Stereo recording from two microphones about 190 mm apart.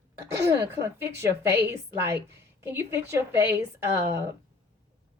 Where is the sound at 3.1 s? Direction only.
15° right (ahead or behind).